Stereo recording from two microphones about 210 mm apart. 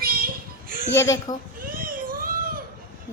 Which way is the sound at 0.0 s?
45° right (ahead or behind).